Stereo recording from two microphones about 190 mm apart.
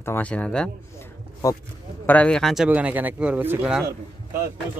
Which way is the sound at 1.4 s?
15° left (ahead or behind).